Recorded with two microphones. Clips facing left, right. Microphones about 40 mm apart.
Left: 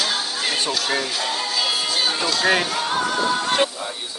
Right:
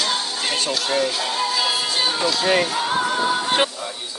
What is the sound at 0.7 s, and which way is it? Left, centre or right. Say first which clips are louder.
Music: right 2 dB; centre.